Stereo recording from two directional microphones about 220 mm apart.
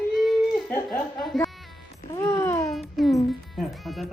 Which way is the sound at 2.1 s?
15° left (ahead or behind).